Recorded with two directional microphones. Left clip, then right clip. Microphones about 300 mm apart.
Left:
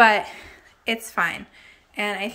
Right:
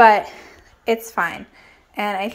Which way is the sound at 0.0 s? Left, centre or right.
Centre.